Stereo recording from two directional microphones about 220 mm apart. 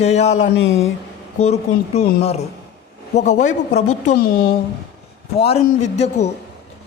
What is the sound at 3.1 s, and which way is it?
Speech, 30° left (ahead or behind).